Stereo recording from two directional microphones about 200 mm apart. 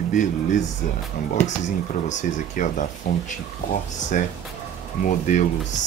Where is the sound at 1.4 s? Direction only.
40° left (ahead or behind).